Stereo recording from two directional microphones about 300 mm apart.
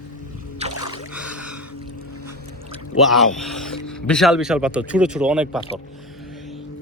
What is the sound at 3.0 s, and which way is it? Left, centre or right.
Speech, centre.